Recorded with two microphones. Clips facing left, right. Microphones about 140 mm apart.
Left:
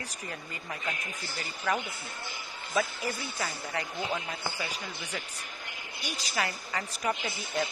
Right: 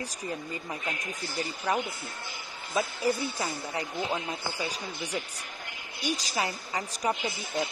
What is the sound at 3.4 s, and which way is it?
Speech, 15° right (ahead or behind).